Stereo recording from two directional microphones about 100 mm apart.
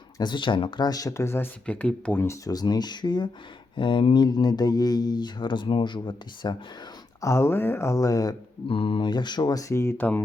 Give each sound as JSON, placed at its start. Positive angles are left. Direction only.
{"t": 0.2, "sound": "speech", "side_deg": 50}
{"t": 1.6, "sound": "speech", "side_deg": 15}
{"t": 2.2, "sound": "speech", "side_deg": 30}
{"t": 7.2, "sound": "speech", "side_deg": 30}
{"t": 8.6, "sound": "speech", "side_deg": 65}